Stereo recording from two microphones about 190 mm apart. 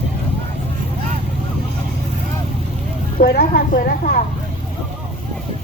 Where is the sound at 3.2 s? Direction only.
50° left (ahead or behind).